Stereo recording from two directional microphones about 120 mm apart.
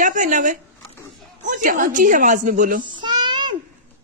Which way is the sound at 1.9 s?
90° right.